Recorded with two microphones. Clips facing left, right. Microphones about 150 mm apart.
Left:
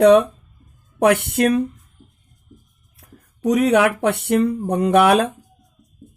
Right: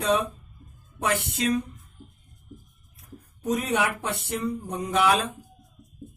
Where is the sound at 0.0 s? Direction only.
65° left (ahead or behind).